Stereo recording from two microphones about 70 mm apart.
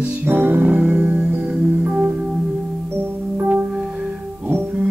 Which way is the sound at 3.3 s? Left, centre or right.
Right.